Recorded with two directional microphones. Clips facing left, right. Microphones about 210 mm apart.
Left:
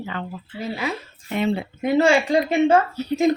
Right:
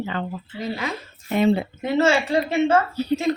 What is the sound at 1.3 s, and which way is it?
Speech, 35° right (ahead or behind).